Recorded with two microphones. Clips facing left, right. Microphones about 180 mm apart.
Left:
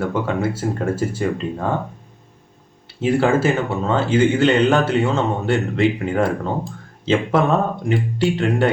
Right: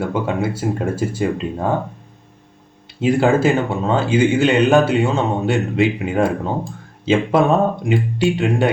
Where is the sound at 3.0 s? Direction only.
15° right (ahead or behind).